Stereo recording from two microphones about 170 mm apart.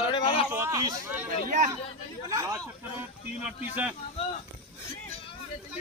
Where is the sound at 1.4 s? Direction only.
50° right (ahead or behind).